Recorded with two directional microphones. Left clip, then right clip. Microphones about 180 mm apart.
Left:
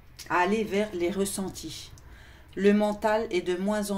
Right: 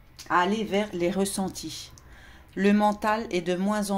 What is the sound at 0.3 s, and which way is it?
Speech, 35° right (ahead or behind).